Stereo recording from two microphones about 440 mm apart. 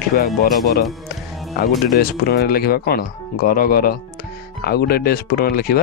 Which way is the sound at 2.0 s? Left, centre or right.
Left.